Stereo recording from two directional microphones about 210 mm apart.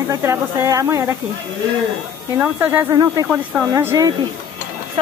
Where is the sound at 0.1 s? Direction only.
15° right (ahead or behind).